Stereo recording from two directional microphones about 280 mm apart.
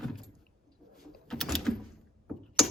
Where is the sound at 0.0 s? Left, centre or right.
Centre.